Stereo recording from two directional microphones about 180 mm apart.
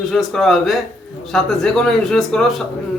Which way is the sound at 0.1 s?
Centre (ahead or behind).